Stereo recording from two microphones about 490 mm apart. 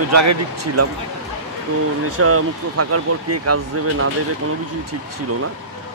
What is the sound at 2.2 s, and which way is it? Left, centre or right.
Speech, right.